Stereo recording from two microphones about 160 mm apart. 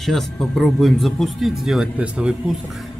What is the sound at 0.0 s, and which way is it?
Speech, centre (ahead or behind).